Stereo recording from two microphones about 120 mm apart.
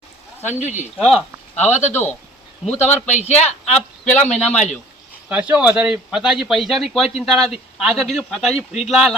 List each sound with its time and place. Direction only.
0.6 s speech: 90° left
0.9 s speech: 5° right (ahead or behind)
1.7 s a man's voice: 80° left
2.6 s speech: 15° left (ahead or behind)
3.1 s speech: 80° left
4.0 s speech: 15° left (ahead or behind)
5.3 s speech: 10° right (ahead or behind)